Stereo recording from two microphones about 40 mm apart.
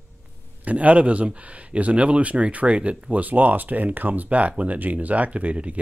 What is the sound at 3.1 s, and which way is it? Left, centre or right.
Speech, right.